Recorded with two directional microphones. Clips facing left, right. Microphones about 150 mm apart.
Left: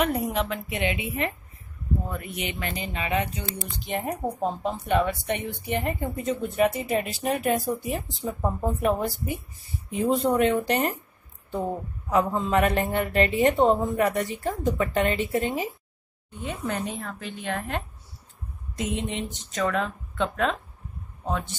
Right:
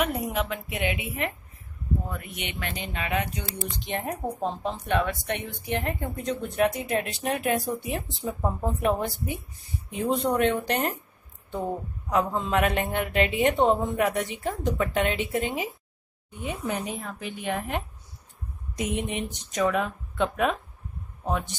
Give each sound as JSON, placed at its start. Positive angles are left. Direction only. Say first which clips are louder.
{"t": 0.0, "sound": "a woman's voice", "louder": "left 2 dB", "side_deg": 0}
{"t": 12.1, "sound": "a woman's voice", "louder": "left 2 dB", "side_deg": 0}
{"t": 16.3, "sound": "speech", "louder": "even", "side_deg": -15}